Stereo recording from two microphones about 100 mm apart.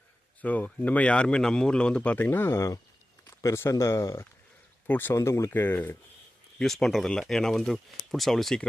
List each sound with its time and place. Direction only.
0.4 s speech: 15° left (ahead or behind); by 4.3 s 30° left (ahead or behind)
4.9 s speech: 20° left (ahead or behind)
6.6 s speech: 5° left (ahead or behind)